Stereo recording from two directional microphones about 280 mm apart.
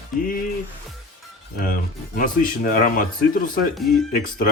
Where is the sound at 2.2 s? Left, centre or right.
Left.